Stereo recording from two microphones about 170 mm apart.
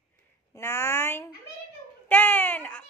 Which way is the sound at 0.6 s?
15° left (ahead or behind).